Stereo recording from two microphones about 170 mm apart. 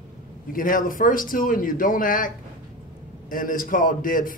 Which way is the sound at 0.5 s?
55° left (ahead or behind).